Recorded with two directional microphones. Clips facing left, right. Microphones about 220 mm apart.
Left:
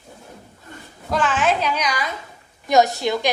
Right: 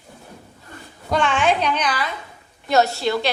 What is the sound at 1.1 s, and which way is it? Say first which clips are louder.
A woman's voice: right 1 dB; centre (ahead or behind).